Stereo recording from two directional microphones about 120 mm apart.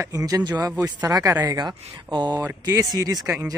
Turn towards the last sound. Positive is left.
turn(degrees=-30)  # may be behind; listen again after turning